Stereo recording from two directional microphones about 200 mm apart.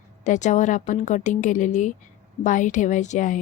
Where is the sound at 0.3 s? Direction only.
35° left (ahead or behind).